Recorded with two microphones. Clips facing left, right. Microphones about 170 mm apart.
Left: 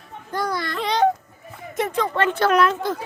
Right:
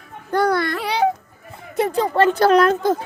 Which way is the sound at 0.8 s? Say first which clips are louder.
Even; 10° right (ahead or behind).